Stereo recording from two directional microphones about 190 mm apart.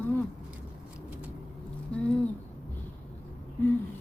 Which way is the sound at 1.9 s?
5° left (ahead or behind).